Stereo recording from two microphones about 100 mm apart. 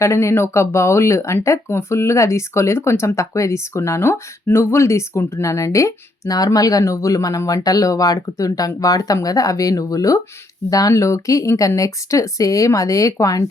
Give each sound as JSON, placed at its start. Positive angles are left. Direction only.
{"t": 0.0, "sound": "speech", "side_deg": 30}